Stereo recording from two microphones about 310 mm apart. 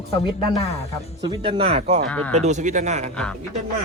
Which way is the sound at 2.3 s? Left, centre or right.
Right.